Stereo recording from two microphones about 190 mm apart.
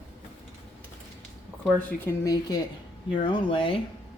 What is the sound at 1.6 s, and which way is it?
Speech, 10° left (ahead or behind).